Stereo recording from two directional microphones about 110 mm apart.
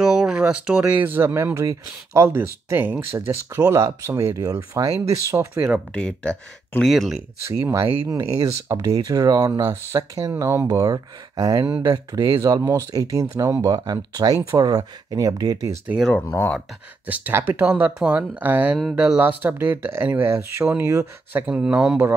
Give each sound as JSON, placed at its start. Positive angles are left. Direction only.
{"t": 0.0, "sound": "speech", "side_deg": -5}
{"t": 5.9, "sound": "speech", "side_deg": 10}
{"t": 6.9, "sound": "speech", "side_deg": 0}
{"t": 7.4, "sound": "speech", "side_deg": -25}
{"t": 16.3, "sound": "speech", "side_deg": 15}
{"t": 17.0, "sound": "speech", "side_deg": -15}